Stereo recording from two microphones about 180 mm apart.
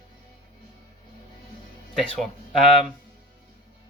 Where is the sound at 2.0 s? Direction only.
Centre (ahead or behind).